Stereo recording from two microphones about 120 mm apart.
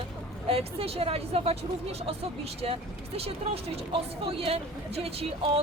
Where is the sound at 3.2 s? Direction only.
55° right (ahead or behind).